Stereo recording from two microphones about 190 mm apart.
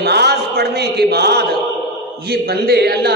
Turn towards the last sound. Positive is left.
turn(degrees=-55)  # may be behind; listen again after turning